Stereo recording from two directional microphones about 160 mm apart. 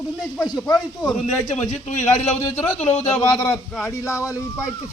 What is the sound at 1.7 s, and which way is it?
Speech, 45° left (ahead or behind).